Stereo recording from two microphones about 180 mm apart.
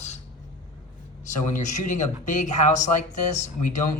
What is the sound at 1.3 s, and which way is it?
Speech, 45° left (ahead or behind).